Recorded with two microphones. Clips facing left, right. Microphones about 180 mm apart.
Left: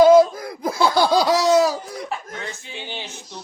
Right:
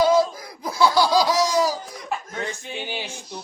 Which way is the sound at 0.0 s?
55° left (ahead or behind).